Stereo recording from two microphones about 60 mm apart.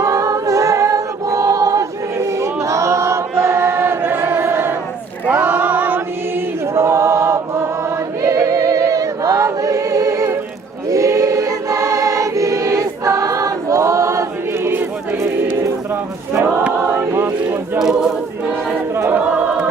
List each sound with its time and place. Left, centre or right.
0.0 s a capella: right
5.2 s choir: right
6.7 s choir: right
8.3 s choir: right
17.1 s choir: right
17.7 s choir: centre
19.1 s choir: right